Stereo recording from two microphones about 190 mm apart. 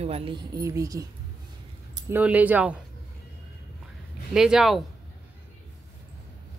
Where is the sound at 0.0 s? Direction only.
30° right (ahead or behind).